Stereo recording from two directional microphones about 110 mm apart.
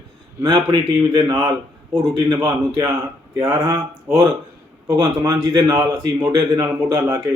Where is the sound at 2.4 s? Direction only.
25° right (ahead or behind).